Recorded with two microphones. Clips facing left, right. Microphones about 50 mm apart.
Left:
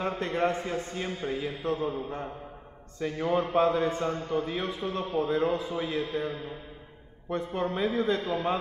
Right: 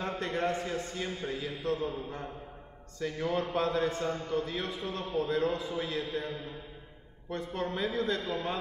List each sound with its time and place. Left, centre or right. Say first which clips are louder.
0.0 s a man's voice: left 4 dB; left